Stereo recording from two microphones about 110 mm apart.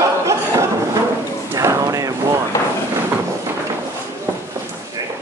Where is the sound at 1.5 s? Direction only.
25° right (ahead or behind).